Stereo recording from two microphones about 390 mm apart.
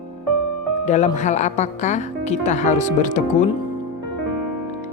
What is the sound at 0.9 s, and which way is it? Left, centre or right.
Speech, centre.